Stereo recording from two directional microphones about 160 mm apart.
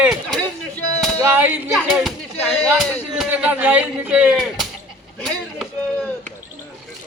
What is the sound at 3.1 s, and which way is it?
Speech, 5° right (ahead or behind).